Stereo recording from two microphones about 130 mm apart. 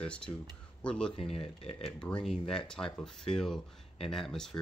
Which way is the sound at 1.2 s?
45° left (ahead or behind).